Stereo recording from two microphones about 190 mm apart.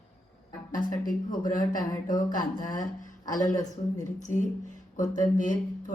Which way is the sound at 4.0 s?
40° left (ahead or behind).